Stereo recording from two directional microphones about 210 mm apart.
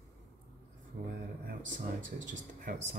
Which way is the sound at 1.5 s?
40° right (ahead or behind).